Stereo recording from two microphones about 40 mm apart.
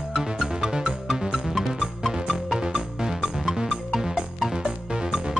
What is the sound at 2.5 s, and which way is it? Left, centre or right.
Music, centre.